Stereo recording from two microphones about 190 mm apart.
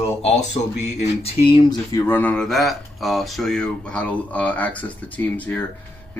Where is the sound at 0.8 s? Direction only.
35° left (ahead or behind); by 5.6 s 10° left (ahead or behind).